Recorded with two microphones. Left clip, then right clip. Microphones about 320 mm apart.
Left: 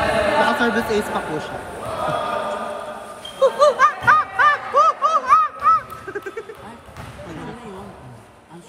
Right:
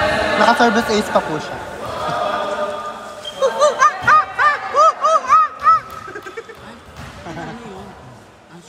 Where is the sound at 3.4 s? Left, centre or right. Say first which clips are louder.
Right 1 dB; centre.